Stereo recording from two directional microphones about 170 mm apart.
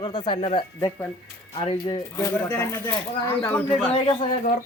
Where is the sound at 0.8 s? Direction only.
15° left (ahead or behind).